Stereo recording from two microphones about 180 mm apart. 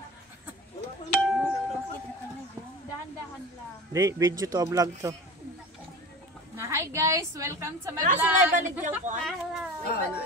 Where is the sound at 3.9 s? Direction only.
15° right (ahead or behind).